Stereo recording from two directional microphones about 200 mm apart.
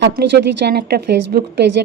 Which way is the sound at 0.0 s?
55° right (ahead or behind).